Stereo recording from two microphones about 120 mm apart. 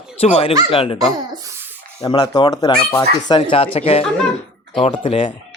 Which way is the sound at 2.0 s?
30° left (ahead or behind).